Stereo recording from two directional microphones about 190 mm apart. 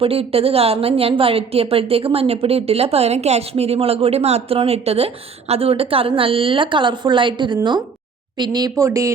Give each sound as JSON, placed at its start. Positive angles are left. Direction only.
{"t": 0.0, "sound": "a woman's voice", "side_deg": -30}